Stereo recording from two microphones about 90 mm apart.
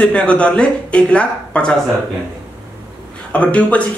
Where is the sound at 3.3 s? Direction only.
15° left (ahead or behind).